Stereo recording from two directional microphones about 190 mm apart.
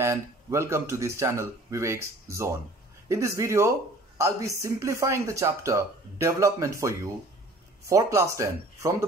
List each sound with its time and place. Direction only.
0.0 s speech: 15° right (ahead or behind)